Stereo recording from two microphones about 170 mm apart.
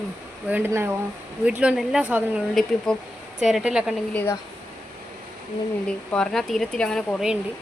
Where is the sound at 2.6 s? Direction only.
5° left (ahead or behind).